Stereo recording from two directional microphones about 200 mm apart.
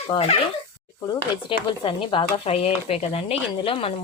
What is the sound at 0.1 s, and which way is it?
Speech, 30° left (ahead or behind).